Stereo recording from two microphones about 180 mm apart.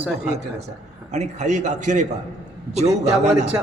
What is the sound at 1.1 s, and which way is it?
Speech, 40° right (ahead or behind).